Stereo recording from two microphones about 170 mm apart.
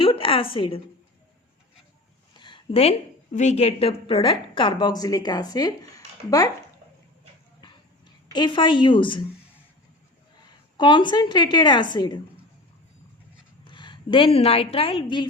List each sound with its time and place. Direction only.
0.0 s a sound: 30° left (ahead or behind)
2.4 s a woman's voice: 30° left (ahead or behind)
8.3 s a woman's voice: 25° left (ahead or behind)
10.8 s a woman's voice: 25° left (ahead or behind)
13.7 s a woman's voice: 25° left (ahead or behind)